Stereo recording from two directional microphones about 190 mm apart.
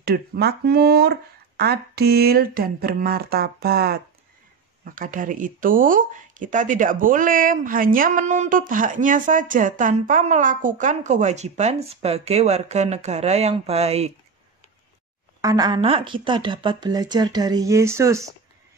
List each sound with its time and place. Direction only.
0.0 s speech: 55° right (ahead or behind); by 14.1 s 35° right (ahead or behind)
15.4 s speech: 20° right (ahead or behind)